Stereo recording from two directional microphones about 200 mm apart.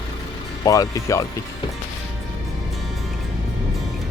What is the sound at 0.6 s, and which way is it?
Speech, 15° left (ahead or behind).